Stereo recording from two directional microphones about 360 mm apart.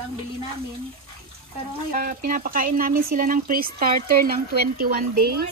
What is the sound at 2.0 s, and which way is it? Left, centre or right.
Speech, right.